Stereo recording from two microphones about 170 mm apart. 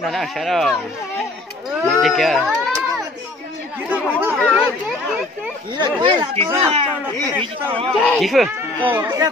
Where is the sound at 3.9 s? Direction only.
10° right (ahead or behind).